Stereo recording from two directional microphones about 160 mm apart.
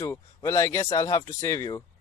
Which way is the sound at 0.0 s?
20° left (ahead or behind).